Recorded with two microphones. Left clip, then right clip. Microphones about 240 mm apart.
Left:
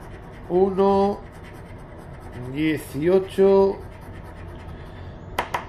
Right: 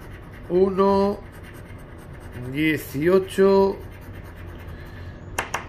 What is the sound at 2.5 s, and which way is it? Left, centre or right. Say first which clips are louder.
Speech: right 1 dB; centre.